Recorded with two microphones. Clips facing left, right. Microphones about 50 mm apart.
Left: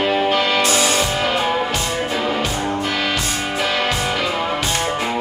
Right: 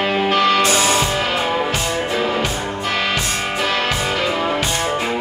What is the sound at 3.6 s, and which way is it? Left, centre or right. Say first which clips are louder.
Music: even; centre.